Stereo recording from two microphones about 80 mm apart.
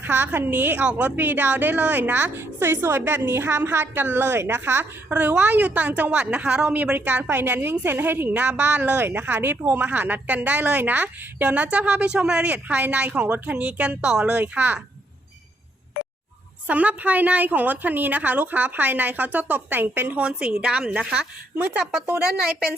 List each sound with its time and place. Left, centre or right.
0.0 s a woman's voice: right; by 14.3 s centre
14.3 s a woman's voice: right
16.6 s a woman's voice: centre
22.2 s a woman's voice: centre